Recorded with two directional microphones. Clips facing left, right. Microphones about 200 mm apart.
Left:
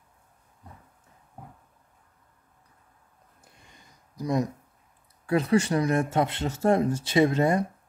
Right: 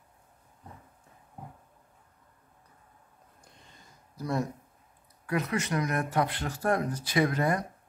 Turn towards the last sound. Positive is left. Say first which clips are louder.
# left 5 dB
turn(degrees=25)  # may be behind; listen again after turning